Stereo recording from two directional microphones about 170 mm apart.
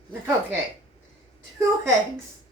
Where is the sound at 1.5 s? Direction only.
15° right (ahead or behind).